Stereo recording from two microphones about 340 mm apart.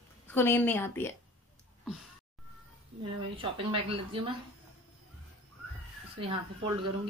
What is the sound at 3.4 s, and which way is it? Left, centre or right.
Speech, centre.